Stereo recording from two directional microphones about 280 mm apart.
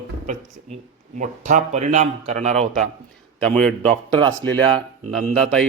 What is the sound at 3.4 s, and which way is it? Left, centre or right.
Speech, centre.